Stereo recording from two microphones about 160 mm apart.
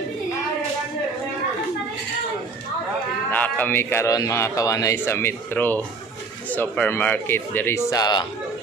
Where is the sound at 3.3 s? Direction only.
10° left (ahead or behind); by 8.3 s 25° left (ahead or behind).